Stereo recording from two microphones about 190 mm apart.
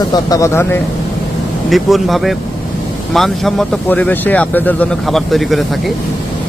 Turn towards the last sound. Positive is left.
turn(degrees=0)  # may be behind; listen again after turning